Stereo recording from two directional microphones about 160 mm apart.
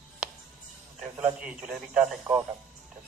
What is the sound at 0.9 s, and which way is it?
A man's voice, 5° right (ahead or behind).